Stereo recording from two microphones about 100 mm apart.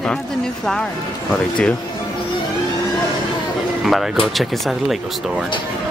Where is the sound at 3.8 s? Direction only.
Centre (ahead or behind).